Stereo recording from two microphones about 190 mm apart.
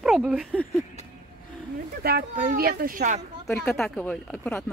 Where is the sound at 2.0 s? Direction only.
55° right (ahead or behind).